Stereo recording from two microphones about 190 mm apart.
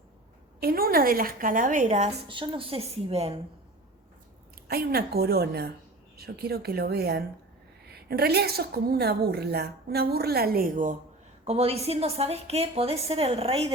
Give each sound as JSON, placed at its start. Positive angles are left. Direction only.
{"t": 0.6, "sound": "a woman's voice", "side_deg": -50}
{"t": 2.2, "sound": "a woman's voice", "side_deg": -25}
{"t": 4.7, "sound": "a woman's voice", "side_deg": -55}
{"t": 11.4, "sound": "a woman's voice", "side_deg": -30}